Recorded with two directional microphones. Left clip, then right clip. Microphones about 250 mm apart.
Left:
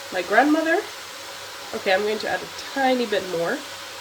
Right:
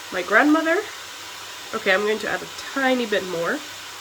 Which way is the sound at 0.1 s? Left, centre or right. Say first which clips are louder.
Right 1 dB; centre.